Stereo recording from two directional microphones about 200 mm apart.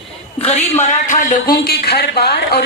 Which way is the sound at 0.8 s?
40° left (ahead or behind).